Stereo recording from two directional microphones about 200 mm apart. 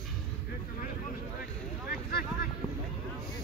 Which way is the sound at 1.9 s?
50° left (ahead or behind).